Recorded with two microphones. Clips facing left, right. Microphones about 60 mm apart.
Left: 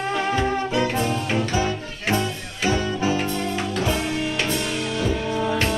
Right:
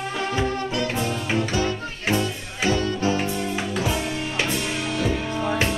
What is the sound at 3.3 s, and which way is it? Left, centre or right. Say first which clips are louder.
Music: left 1 dB; centre.